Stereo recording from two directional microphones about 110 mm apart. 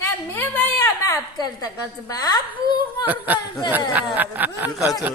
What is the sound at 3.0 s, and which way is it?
Speech, 15° right (ahead or behind).